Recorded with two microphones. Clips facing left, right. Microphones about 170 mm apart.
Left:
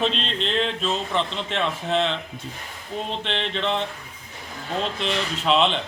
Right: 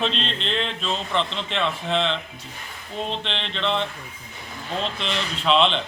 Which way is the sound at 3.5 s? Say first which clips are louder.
Right 2 dB; 10° left (ahead or behind).